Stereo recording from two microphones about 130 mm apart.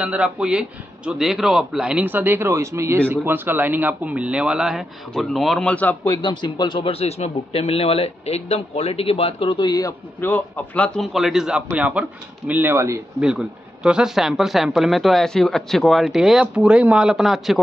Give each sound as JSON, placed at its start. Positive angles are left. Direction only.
{"t": 0.0, "sound": "a man's voice", "side_deg": -10}
{"t": 6.2, "sound": "speech", "side_deg": 35}
{"t": 10.2, "sound": "a man's voice", "side_deg": 15}
{"t": 11.0, "sound": "a man's voice", "side_deg": 0}
{"t": 13.2, "sound": "speech", "side_deg": -5}